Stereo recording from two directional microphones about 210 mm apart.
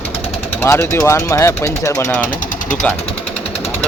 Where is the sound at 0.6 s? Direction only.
10° left (ahead or behind).